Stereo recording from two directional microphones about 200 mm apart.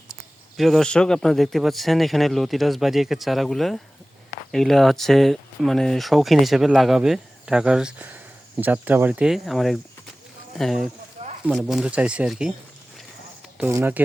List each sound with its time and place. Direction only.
0.1 s a man's voice: centre (ahead or behind)
13.6 s speech: 10° right (ahead or behind)